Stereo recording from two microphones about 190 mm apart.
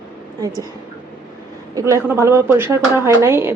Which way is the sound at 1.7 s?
15° right (ahead or behind).